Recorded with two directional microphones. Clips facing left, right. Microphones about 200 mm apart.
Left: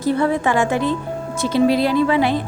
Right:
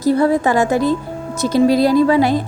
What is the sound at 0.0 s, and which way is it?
A woman's voice, 40° right (ahead or behind).